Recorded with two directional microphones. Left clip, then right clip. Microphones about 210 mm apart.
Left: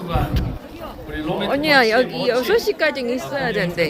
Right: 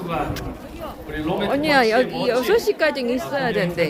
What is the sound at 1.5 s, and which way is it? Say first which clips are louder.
A woman's voice: left 2 dB; centre (ahead or behind).